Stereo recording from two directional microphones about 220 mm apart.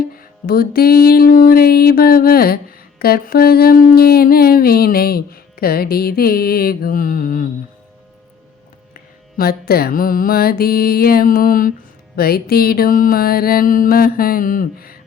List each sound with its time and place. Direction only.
0.2 s music: 45° left (ahead or behind)
9.4 s music: 45° left (ahead or behind)